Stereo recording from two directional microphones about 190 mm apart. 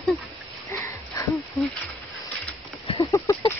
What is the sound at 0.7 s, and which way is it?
Sniff, 15° left (ahead or behind).